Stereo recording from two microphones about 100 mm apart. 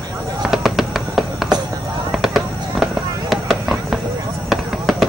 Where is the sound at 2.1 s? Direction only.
5° right (ahead or behind).